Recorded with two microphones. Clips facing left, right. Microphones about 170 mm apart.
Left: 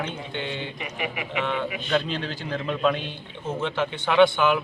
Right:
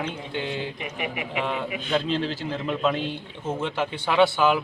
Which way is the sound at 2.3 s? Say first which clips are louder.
Right 1 dB; 5° right (ahead or behind).